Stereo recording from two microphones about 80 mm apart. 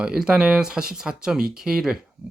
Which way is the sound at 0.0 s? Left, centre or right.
Centre.